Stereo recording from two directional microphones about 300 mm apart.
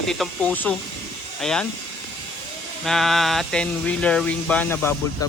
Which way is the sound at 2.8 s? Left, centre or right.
Centre.